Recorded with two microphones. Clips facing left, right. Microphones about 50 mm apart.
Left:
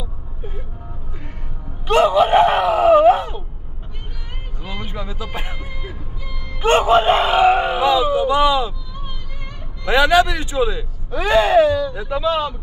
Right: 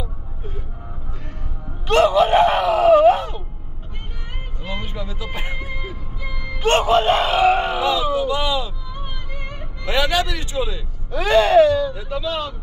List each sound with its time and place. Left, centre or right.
1.9 s speech: centre
4.8 s music: centre
5.5 s music: centre
6.6 s a sound: centre
8.9 s music: right
9.8 s a man's voice: centre